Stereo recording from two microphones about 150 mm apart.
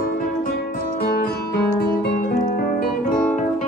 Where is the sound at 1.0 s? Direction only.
90° left.